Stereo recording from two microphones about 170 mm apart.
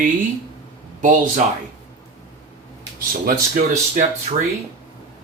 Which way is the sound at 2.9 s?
55° right (ahead or behind).